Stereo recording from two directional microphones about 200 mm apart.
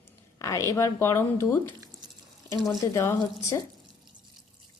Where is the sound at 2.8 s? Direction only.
15° left (ahead or behind).